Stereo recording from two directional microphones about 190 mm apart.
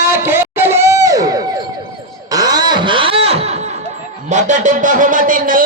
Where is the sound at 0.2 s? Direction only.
10° right (ahead or behind).